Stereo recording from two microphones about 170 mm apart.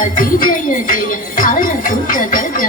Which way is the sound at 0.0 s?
55° left (ahead or behind).